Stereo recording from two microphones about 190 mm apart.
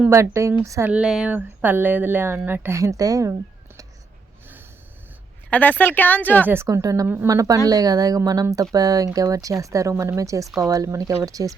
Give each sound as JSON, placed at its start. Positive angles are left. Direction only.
{"t": 0.0, "sound": "speech", "side_deg": -15}
{"t": 5.5, "sound": "a woman's voice", "side_deg": 10}
{"t": 6.5, "sound": "speech", "side_deg": -15}